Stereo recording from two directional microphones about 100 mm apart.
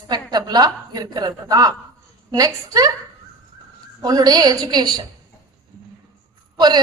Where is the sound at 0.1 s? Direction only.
45° right (ahead or behind).